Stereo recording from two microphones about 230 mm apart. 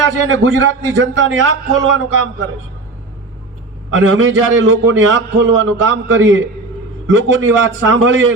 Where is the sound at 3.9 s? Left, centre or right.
Right.